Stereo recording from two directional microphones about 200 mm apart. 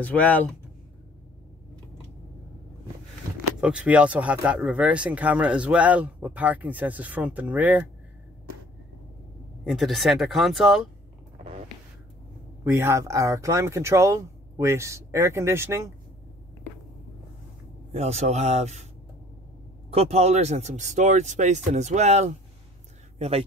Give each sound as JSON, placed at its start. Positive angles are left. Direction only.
{"t": 0.0, "sound": "speech", "side_deg": 10}
{"t": 3.6, "sound": "speech", "side_deg": -5}
{"t": 9.7, "sound": "speech", "side_deg": 0}
{"t": 12.6, "sound": "speech", "side_deg": -15}
{"t": 17.9, "sound": "speech", "side_deg": -35}
{"t": 19.9, "sound": "speech", "side_deg": -30}